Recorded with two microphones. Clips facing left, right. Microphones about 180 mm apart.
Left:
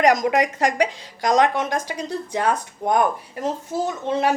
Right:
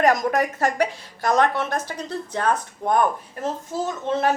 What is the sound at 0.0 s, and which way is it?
A woman's voice, 15° left (ahead or behind).